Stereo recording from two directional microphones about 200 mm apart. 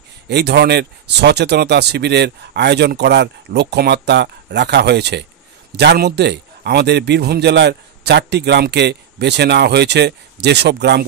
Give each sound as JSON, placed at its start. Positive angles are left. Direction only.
{"t": 0.3, "sound": "a man's voice", "side_deg": -55}